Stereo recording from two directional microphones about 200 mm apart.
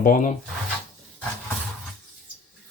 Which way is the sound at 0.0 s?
40° left (ahead or behind).